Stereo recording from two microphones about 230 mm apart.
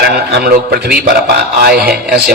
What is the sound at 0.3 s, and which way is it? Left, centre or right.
A man's voice, right.